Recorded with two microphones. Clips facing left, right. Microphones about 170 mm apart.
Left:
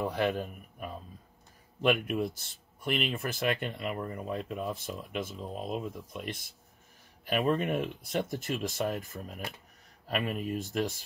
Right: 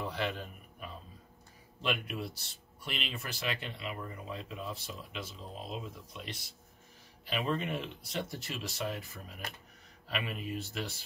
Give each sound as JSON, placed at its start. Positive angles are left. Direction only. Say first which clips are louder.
{"t": 0.0, "sound": "a man's voice", "louder": "left 6 dB", "side_deg": 50}